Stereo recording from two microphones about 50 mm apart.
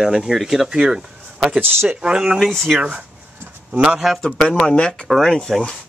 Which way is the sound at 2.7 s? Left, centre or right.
Right.